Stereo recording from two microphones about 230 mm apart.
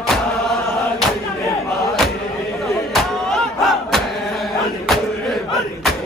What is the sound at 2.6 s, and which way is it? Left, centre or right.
Battle cry, centre.